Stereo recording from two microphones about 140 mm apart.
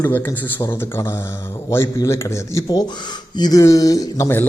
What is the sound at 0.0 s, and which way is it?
A man's voice, 20° left (ahead or behind).